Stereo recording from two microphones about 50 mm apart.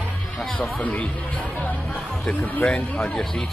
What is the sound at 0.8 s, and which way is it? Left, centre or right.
Speech, left.